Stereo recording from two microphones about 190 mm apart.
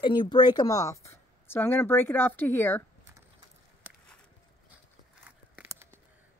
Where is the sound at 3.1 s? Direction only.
15° right (ahead or behind).